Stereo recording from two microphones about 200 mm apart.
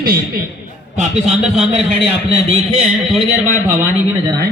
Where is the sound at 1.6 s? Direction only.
Centre (ahead or behind).